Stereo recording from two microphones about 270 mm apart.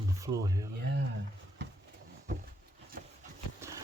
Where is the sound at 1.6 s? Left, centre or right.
Right.